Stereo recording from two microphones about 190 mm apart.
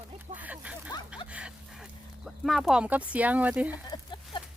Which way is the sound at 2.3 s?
Centre (ahead or behind).